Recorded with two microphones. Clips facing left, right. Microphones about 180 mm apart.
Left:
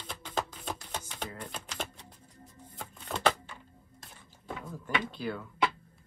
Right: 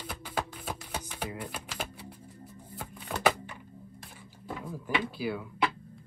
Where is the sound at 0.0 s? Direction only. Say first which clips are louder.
Even; 10° right (ahead or behind).